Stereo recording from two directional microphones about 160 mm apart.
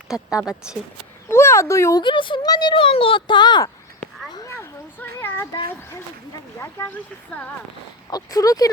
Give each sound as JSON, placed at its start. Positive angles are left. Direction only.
{"t": 0.1, "sound": "speech", "side_deg": -5}
{"t": 1.3, "sound": "a child's voice", "side_deg": 15}
{"t": 4.3, "sound": "a sound", "side_deg": 20}
{"t": 6.6, "sound": "speech", "side_deg": 15}
{"t": 8.1, "sound": "a child's voice", "side_deg": 20}